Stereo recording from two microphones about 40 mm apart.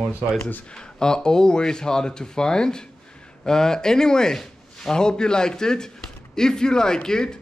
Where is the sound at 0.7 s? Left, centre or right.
Centre.